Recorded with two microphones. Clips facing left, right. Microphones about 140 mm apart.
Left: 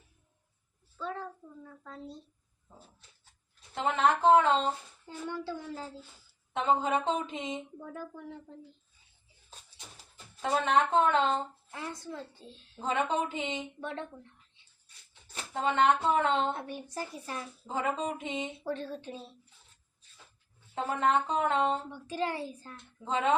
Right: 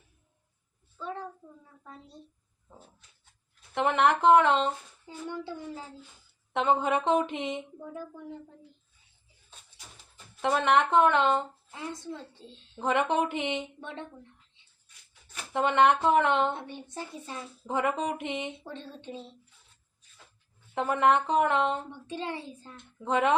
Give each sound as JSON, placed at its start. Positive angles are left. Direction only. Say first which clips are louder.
{"t": 1.0, "sound": "a sound", "louder": "even", "side_deg": -15}
{"t": 3.8, "sound": "speech", "louder": "right 3 dB", "side_deg": -70}
{"t": 6.5, "sound": "speech", "louder": "right 2 dB", "side_deg": -70}
{"t": 10.4, "sound": "speech", "louder": "right 3 dB", "side_deg": -70}
{"t": 11.7, "sound": "a woman's voice", "louder": "right 4 dB", "side_deg": -25}
{"t": 12.8, "sound": "speech", "louder": "right 4 dB", "side_deg": -70}
{"t": 15.1, "sound": "a sound", "louder": "left 1 dB", "side_deg": 30}
{"t": 15.5, "sound": "speech", "louder": "right 3 dB", "side_deg": -70}
{"t": 16.6, "sound": "a woman's voice", "louder": "left 1 dB", "side_deg": -25}
{"t": 17.7, "sound": "speech", "louder": "right 4 dB", "side_deg": -70}
{"t": 18.6, "sound": "a woman's voice", "louder": "left 6 dB", "side_deg": -25}
{"t": 20.7, "sound": "speech", "louder": "right 4 dB", "side_deg": -70}
{"t": 22.0, "sound": "a woman's voice", "louder": "left 2 dB", "side_deg": -25}
{"t": 23.0, "sound": "speech", "louder": "right 3 dB", "side_deg": -65}